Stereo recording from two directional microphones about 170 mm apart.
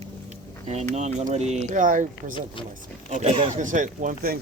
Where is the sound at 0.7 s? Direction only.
40° right (ahead or behind).